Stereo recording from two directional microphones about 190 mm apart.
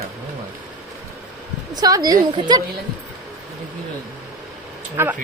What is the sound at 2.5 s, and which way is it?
Speech, 20° right (ahead or behind).